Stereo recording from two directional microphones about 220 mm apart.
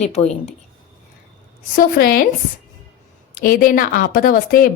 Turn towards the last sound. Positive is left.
turn(degrees=40)  # may be behind; listen again after turning